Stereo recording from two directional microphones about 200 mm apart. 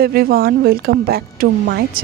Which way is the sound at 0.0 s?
50° right (ahead or behind).